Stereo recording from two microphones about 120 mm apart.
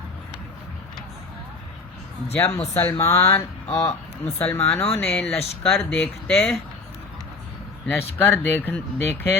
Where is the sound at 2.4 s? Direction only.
60° left (ahead or behind).